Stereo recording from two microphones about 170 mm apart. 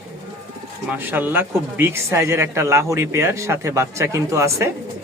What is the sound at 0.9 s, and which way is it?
Speech, 10° right (ahead or behind).